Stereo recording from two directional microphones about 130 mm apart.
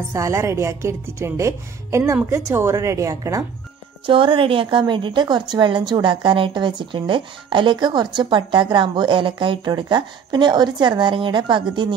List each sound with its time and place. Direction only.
0.1 s a woman's voice: 25° right (ahead or behind)
4.0 s a woman's voice: 40° right (ahead or behind)